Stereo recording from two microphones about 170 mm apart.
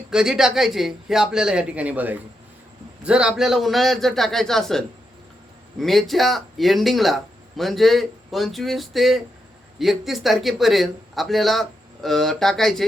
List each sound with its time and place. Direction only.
0.1 s speech: 5° right (ahead or behind)